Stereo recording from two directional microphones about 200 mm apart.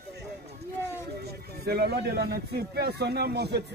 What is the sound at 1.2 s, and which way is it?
Speech, 50° right (ahead or behind).